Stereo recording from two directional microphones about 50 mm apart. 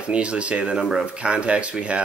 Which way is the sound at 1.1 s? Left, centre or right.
Right.